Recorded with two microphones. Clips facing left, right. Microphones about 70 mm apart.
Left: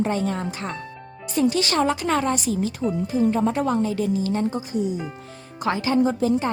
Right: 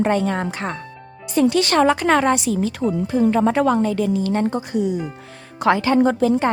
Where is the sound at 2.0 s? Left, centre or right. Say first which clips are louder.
Right 6 dB; right.